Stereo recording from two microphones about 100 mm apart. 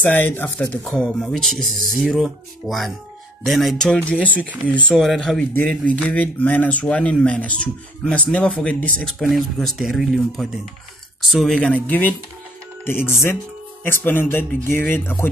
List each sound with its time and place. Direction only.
0.1 s speech: 20° left (ahead or behind)
1.2 s speech: 5° left (ahead or behind)
4.9 s speech: centre (ahead or behind); by 15.2 s 20° left (ahead or behind)